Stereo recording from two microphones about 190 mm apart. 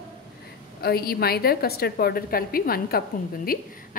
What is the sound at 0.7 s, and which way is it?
A woman's voice, 55° left (ahead or behind).